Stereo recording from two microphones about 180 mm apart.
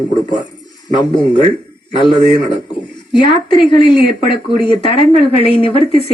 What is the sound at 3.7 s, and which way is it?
Speech, 25° left (ahead or behind).